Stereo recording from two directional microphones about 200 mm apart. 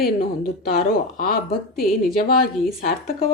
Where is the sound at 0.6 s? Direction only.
45° left (ahead or behind).